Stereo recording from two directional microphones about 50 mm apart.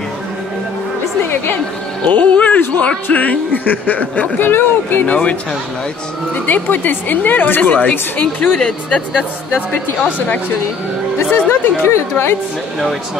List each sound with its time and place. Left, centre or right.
2.0 s speech: left
5.0 s speech: left
6.3 s speech: left
8.5 s speech: centre
11.1 s speech: left